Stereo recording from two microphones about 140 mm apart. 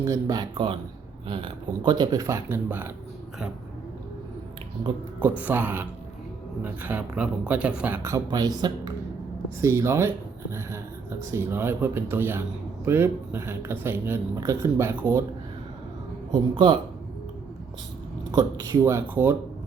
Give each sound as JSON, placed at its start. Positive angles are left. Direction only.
{"t": 0.0, "sound": "speech", "side_deg": -25}
{"t": 5.4, "sound": "a man's voice", "side_deg": -15}
{"t": 16.3, "sound": "speech", "side_deg": -35}
{"t": 18.3, "sound": "speech", "side_deg": -25}